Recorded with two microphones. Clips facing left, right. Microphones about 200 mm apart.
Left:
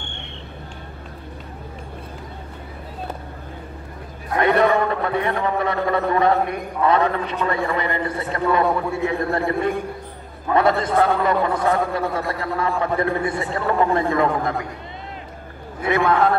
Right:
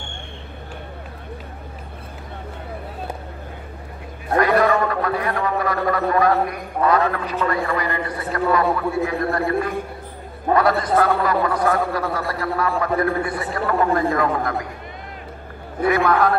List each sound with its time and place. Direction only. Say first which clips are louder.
4.4 s a sound: even; 25° left (ahead or behind)
6.9 s a man's voice: left 1 dB; 20° left (ahead or behind)
15.8 s a man's voice: right 1 dB; 25° left (ahead or behind)